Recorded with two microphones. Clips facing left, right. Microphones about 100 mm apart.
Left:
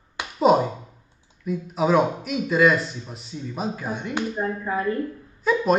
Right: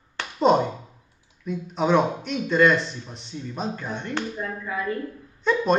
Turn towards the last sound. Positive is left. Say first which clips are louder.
# left 1 dB
turn(degrees=5)  # may be behind; listen again after turning